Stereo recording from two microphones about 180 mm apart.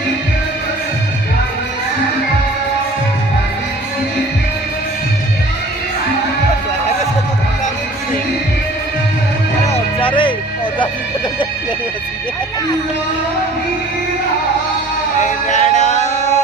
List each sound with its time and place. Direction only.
9.6 s music: 30° left (ahead or behind)
15.2 s music: 40° left (ahead or behind)